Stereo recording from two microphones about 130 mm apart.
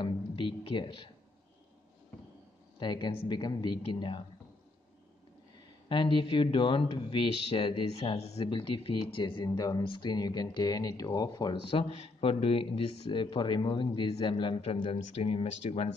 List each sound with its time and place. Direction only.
0.0 s speech: 40° left (ahead or behind)
2.8 s speech: 35° left (ahead or behind)
5.9 s speech: 40° left (ahead or behind)
8.2 s speech: 55° left (ahead or behind)
8.5 s speech: 40° left (ahead or behind)
11.7 s speech: 45° left (ahead or behind)